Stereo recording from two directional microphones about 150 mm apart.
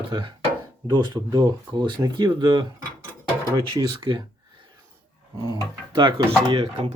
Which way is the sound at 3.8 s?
35° right (ahead or behind).